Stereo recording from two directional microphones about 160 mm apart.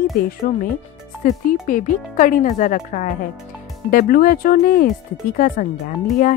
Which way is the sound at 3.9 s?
60° left (ahead or behind).